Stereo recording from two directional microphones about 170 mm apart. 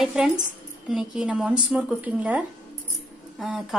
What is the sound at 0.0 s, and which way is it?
A woman's voice, centre (ahead or behind).